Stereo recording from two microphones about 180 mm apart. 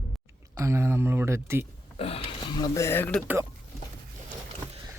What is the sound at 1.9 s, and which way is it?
Speech, 30° left (ahead or behind).